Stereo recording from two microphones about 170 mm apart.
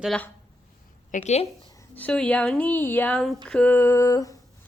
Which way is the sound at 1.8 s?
10° left (ahead or behind).